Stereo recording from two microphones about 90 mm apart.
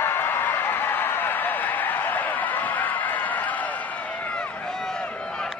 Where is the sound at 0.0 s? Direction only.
25° left (ahead or behind).